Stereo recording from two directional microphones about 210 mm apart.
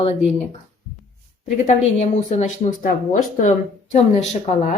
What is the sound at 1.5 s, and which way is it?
A woman's voice, 35° left (ahead or behind).